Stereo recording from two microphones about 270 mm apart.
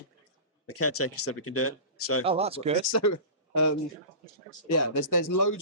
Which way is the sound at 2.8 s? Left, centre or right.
Left.